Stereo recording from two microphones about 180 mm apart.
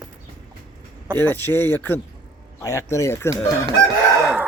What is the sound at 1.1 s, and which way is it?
Speech, 10° left (ahead or behind).